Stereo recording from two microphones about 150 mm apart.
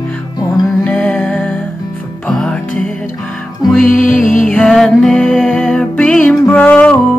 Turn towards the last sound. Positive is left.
turn(degrees=10)  # may be behind; listen again after turning